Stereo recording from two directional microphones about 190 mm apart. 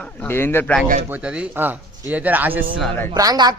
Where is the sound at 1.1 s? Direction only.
5° right (ahead or behind).